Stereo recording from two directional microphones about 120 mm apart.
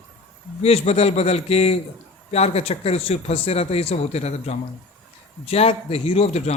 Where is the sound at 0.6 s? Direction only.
60° left (ahead or behind).